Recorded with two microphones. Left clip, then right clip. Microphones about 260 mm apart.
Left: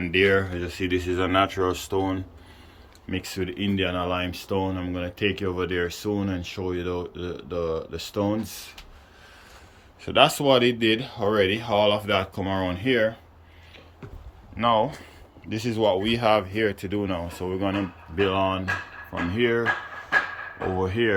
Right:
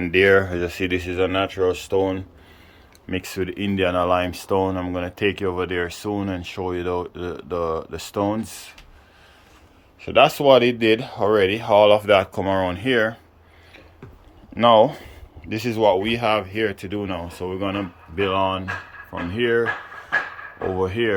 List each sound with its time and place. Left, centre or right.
0.0 s speech: centre
10.0 s speech: centre
14.5 s speech: right
15.4 s speech: centre